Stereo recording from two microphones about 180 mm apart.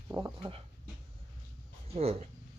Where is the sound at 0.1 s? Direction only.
25° right (ahead or behind).